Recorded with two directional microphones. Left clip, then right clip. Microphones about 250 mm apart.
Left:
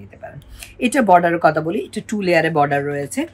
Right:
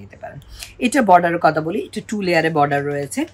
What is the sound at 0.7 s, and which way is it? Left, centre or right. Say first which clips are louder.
A woman's voice: even; centre.